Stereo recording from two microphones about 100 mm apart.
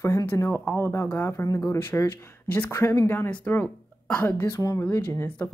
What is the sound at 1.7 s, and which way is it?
Speech, 25° left (ahead or behind).